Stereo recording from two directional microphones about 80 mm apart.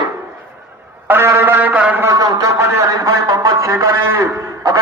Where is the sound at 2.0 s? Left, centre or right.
Right.